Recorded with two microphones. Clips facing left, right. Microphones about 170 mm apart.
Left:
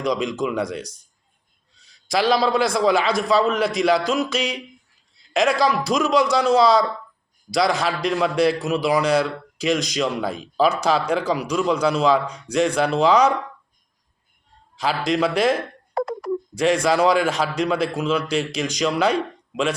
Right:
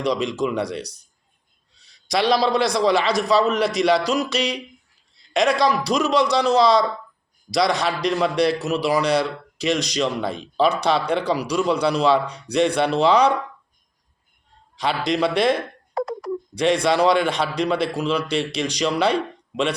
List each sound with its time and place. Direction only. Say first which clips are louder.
0.1 s speech: left 1 dB; centre (ahead or behind)
2.0 s speech: even; 5° left (ahead or behind)
14.8 s speech: even; centre (ahead or behind)
16.0 s a sound: left 1 dB; 60° left (ahead or behind)
16.8 s speech: even; 5° left (ahead or behind)